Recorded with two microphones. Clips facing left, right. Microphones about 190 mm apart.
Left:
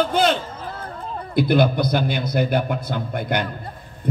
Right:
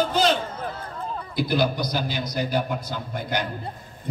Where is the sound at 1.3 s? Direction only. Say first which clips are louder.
Left 6 dB; 55° left (ahead or behind).